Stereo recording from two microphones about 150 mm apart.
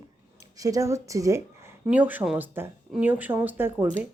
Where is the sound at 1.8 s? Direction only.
10° right (ahead or behind).